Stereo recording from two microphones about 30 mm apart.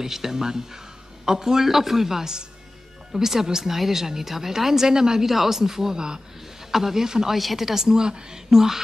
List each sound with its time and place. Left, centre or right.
0.0 s speech: centre
5.3 s speech: centre
6.7 s speech: centre
7.3 s speech: centre